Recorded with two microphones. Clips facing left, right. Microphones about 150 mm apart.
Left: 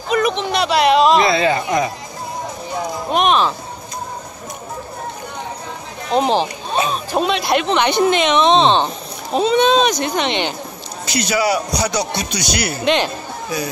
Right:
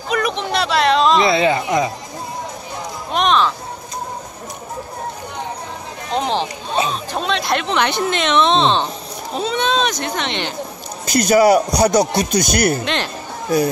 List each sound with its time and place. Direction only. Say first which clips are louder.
0.1 s speech: left 2 dB; 5° left (ahead or behind)
1.2 s speech: even; 20° right (ahead or behind)
3.1 s music: left 1 dB; 10° left (ahead or behind)
6.1 s speech: left 4 dB; 10° left (ahead or behind)
11.1 s a man's voice: right 6 dB; 45° right (ahead or behind)
12.8 s speech: left 6 dB; 5° left (ahead or behind)
13.5 s a man's voice: right 8 dB; 50° right (ahead or behind)